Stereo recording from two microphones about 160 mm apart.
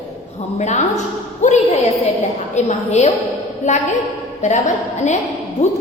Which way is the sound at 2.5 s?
45° left (ahead or behind).